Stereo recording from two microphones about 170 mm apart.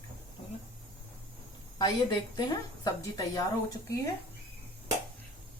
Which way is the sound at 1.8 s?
25° left (ahead or behind).